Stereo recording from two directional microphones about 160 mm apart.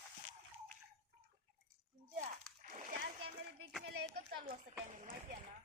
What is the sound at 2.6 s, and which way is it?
Splash, 55° right (ahead or behind).